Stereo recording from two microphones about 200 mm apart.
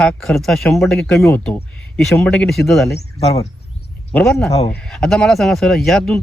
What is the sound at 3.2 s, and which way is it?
Speech, 30° left (ahead or behind).